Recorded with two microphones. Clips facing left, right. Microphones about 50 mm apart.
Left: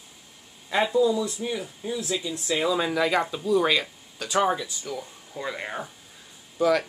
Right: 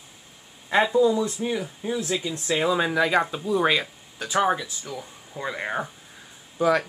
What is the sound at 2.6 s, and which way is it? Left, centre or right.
Speech, right.